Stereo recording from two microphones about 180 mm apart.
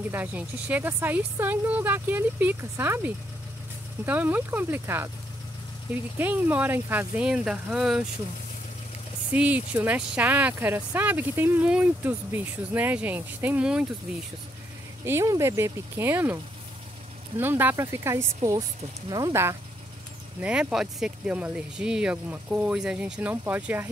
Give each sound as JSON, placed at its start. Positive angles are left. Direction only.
{"t": 0.1, "sound": "speech", "side_deg": -10}
{"t": 6.1, "sound": "speech", "side_deg": -10}
{"t": 9.3, "sound": "speech", "side_deg": -10}
{"t": 15.0, "sound": "speech", "side_deg": -15}
{"t": 17.4, "sound": "speech", "side_deg": -10}
{"t": 20.3, "sound": "speech", "side_deg": -5}